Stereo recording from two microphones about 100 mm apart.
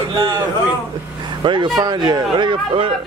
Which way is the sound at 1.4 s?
50° right (ahead or behind).